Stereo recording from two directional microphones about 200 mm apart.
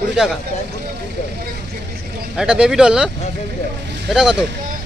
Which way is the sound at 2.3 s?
5° right (ahead or behind).